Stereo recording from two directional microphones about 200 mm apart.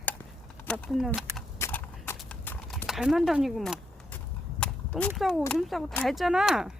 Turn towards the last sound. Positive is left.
turn(degrees=0)  # may be behind; listen again after turning